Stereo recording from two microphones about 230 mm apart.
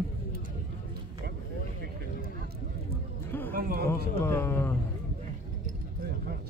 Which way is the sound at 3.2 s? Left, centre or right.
Centre.